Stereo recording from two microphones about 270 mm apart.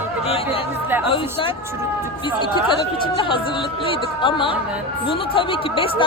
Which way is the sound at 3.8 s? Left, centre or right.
Centre.